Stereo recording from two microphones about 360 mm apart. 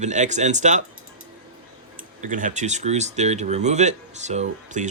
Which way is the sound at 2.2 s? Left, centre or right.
Right.